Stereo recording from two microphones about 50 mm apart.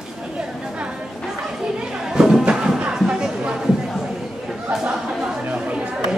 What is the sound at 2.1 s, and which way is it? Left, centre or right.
Music, centre.